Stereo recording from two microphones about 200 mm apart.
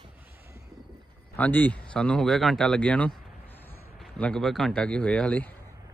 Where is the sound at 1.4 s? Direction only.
10° left (ahead or behind).